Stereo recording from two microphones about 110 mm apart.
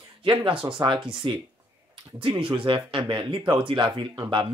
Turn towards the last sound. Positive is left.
turn(degrees=-45)  # may be behind; listen again after turning